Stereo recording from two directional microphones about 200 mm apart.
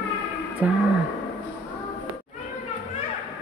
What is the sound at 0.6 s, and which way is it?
Speech, 5° right (ahead or behind).